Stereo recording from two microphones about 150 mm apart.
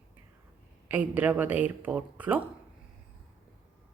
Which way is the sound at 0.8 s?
10° right (ahead or behind).